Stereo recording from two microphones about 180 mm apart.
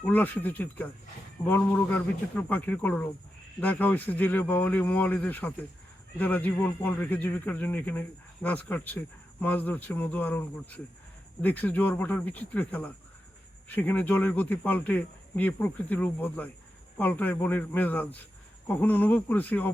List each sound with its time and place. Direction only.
0.0 s speech: 10° left (ahead or behind)